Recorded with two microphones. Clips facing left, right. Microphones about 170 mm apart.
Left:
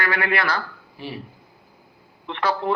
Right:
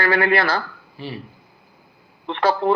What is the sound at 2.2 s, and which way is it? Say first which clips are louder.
Speech: right 5 dB; 30° right (ahead or behind).